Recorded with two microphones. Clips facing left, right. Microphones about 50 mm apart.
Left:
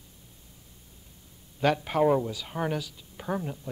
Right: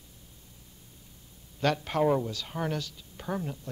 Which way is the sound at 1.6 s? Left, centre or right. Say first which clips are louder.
Left 3 dB; centre.